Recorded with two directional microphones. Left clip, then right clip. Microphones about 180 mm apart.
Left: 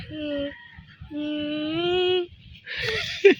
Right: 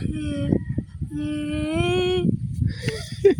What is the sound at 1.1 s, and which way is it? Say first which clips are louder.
Female singing: right 1 dB; 15° right (ahead or behind).